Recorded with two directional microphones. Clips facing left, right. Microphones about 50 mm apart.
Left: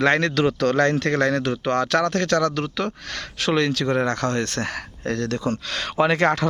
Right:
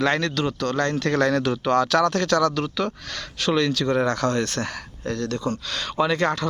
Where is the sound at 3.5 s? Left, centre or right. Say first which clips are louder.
Even; left.